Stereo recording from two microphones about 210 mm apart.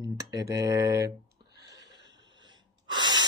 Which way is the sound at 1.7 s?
55° right (ahead or behind).